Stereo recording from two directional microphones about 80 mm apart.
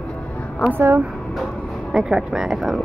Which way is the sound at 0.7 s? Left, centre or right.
Right.